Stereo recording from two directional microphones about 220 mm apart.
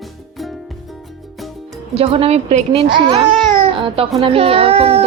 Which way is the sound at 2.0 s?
25° right (ahead or behind).